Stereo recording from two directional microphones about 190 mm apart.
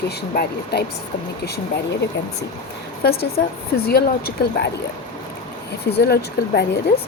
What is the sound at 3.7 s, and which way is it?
Speech, 55° left (ahead or behind).